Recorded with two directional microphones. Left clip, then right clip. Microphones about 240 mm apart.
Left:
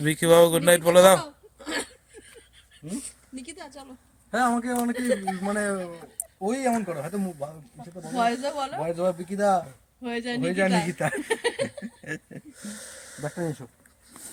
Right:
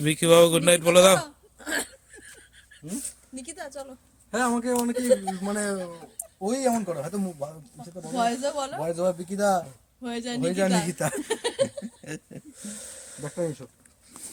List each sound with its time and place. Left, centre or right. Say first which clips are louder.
0.0 s speech: even; centre
1.2 s a sound: even; right
3.0 s a sound: right 1 dB; right
4.3 s speech: left 1 dB; left
4.9 s speech: right 3 dB; centre
5.5 s speech: left 2 dB; centre
11.3 s speech: even; centre
11.8 s speech: left 2 dB; centre